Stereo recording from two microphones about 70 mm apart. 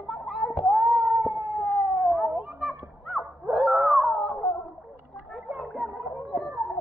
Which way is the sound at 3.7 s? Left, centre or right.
Right.